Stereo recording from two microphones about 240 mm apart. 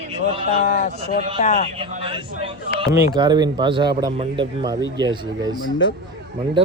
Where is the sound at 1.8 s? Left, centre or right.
Right.